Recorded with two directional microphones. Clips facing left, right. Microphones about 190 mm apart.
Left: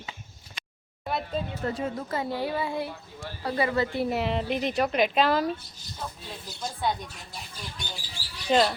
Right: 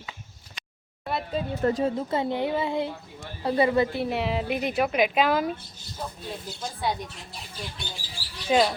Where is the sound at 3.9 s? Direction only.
Centre (ahead or behind).